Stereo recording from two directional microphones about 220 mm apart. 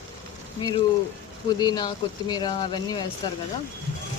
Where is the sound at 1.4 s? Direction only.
20° left (ahead or behind).